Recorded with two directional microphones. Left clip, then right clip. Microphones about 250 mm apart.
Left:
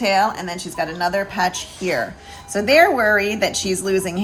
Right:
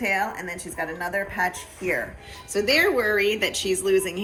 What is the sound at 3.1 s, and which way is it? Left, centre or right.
A woman's voice, left.